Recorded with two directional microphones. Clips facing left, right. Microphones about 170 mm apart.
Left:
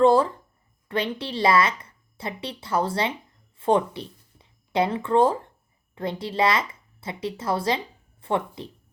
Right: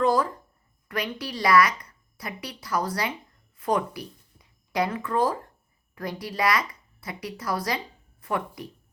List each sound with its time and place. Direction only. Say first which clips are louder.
0.0 s a woman's voice: left 5 dB; 30° left (ahead or behind)